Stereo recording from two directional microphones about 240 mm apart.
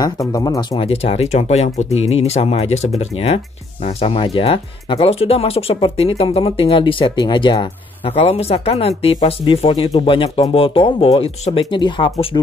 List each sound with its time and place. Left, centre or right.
0.0 s speech: centre